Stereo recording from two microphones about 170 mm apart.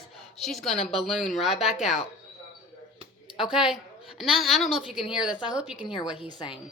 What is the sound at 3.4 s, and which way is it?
A woman's voice, 5° right (ahead or behind).